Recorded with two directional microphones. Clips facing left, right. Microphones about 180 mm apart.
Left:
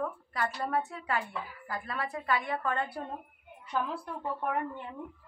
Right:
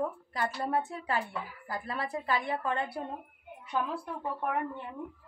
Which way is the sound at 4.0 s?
10° right (ahead or behind).